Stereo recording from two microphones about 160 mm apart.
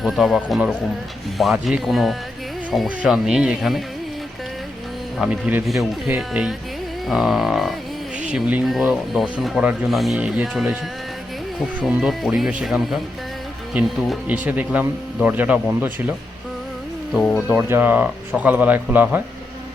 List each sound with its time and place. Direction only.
0.0 s speech: centre (ahead or behind)
5.2 s speech: 10° right (ahead or behind)
11.9 s speech: 5° right (ahead or behind)
17.2 s speech: centre (ahead or behind)
17.6 s speech: 15° right (ahead or behind)